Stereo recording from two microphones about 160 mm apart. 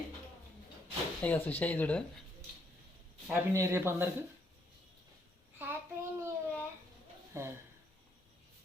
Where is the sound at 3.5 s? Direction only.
15° right (ahead or behind).